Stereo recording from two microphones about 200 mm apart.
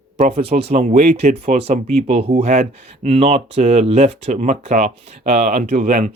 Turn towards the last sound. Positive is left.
turn(degrees=-35)  # may be behind; listen again after turning